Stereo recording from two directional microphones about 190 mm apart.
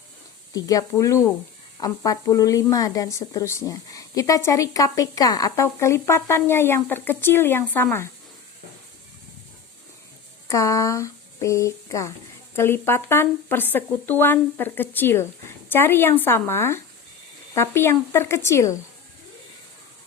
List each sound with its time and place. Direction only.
0.5 s speech: 20° left (ahead or behind)
10.5 s speech: 15° left (ahead or behind)